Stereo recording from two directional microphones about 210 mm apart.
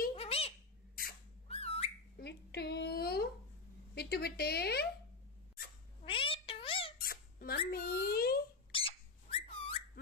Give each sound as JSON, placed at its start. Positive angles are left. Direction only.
{"t": 0.1, "sound": "cat", "side_deg": 30}
{"t": 1.5, "sound": "whistling", "side_deg": 30}
{"t": 2.1, "sound": "a sound", "side_deg": 50}
{"t": 3.9, "sound": "a woman's voice", "side_deg": 50}
{"t": 6.0, "sound": "meow", "side_deg": 25}
{"t": 7.0, "sound": "a sound", "side_deg": 45}
{"t": 8.7, "sound": "bird", "side_deg": 25}